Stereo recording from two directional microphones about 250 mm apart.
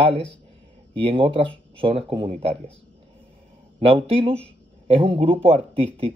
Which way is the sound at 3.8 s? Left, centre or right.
Right.